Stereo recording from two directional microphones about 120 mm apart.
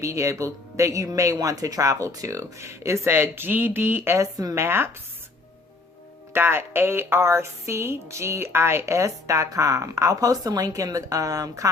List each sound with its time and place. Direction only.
0.0 s a woman's voice: 25° right (ahead or behind)
6.3 s a woman's voice: 20° right (ahead or behind)